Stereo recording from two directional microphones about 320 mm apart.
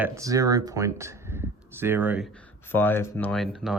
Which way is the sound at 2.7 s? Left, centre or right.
Centre.